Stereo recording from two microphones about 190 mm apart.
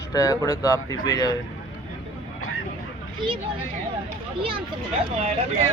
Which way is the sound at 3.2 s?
25° right (ahead or behind).